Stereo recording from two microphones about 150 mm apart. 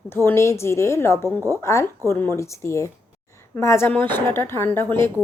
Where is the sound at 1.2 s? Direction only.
20° right (ahead or behind).